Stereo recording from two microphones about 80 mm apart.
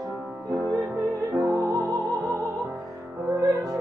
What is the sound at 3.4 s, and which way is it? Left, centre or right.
Music, right.